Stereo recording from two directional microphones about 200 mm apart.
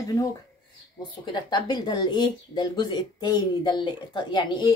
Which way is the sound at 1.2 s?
20° left (ahead or behind).